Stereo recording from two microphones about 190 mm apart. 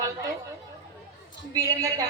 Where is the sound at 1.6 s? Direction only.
20° right (ahead or behind).